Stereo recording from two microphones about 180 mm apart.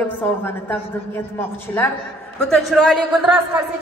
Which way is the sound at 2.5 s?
Centre (ahead or behind).